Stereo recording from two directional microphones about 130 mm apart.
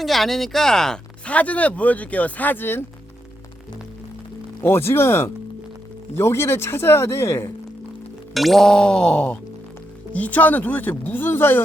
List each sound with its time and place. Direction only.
0.0 s speech: centre (ahead or behind); by 2.8 s 15° left (ahead or behind)
4.6 s speech: 20° left (ahead or behind)
8.3 s speech: centre (ahead or behind); by 11.6 s 15° left (ahead or behind)